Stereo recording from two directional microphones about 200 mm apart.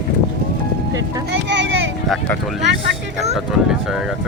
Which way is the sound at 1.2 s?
60° right (ahead or behind).